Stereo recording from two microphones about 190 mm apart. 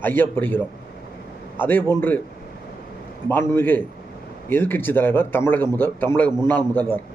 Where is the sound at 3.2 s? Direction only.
10° left (ahead or behind).